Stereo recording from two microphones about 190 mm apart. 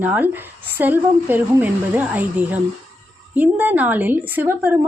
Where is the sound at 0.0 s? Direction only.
10° right (ahead or behind).